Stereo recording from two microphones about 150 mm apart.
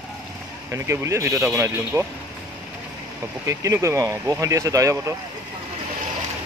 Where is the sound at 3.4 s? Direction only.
20° right (ahead or behind).